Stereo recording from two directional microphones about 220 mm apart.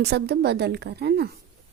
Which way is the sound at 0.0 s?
50° right (ahead or behind).